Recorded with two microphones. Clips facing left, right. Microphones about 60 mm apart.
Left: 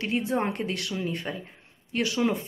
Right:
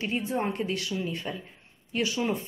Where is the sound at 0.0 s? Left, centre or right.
Left.